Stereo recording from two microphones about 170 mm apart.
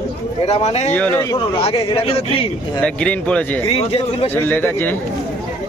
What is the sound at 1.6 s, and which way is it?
Speech, 35° left (ahead or behind).